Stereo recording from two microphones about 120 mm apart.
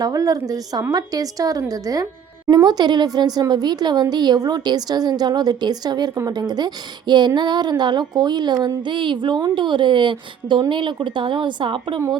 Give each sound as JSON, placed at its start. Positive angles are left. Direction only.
{"t": 0.0, "sound": "speech", "side_deg": -30}